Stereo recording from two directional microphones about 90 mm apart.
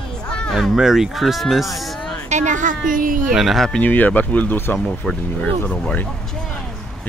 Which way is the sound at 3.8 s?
20° left (ahead or behind).